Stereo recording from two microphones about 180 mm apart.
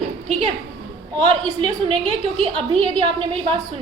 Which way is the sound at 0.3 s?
35° right (ahead or behind).